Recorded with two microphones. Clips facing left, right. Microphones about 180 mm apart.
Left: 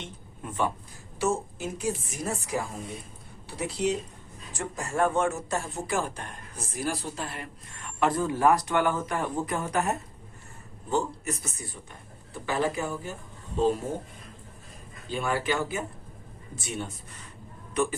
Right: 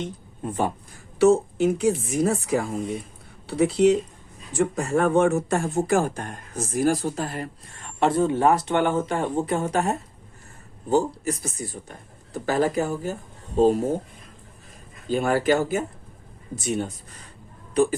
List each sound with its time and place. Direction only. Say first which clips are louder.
0.0 s speech: right 9 dB; 40° right (ahead or behind)
1.2 s a woman's voice: right 11 dB; 65° right (ahead or behind); by 13.8 s 40° right (ahead or behind)
15.0 s speech: right 7 dB; 40° right (ahead or behind)